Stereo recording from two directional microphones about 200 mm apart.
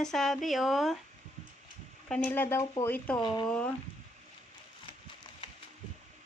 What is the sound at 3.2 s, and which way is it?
Speech, 25° left (ahead or behind).